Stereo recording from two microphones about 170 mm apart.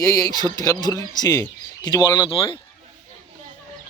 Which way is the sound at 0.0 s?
20° left (ahead or behind).